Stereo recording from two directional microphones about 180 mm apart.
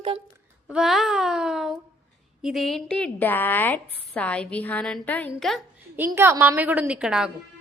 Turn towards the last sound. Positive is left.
turn(degrees=-5)  # may be behind; listen again after turning